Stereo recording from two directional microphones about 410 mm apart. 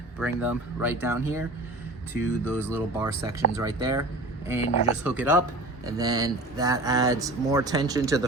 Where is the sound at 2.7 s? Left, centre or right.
Centre.